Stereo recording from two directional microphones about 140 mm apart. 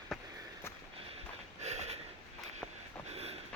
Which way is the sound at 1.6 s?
50° right (ahead or behind).